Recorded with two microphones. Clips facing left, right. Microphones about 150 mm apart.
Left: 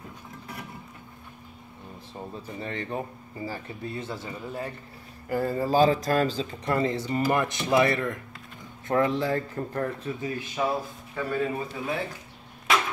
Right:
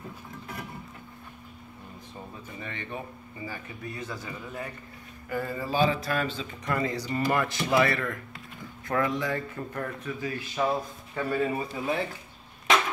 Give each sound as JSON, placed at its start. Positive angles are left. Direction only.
{"t": 2.6, "sound": "a man's voice", "side_deg": 35}
{"t": 10.5, "sound": "speech", "side_deg": 15}
{"t": 11.1, "sound": "a man's voice", "side_deg": -5}